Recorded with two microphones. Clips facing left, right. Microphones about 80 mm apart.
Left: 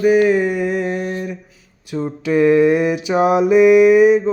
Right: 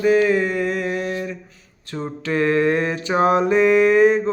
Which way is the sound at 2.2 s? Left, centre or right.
Centre.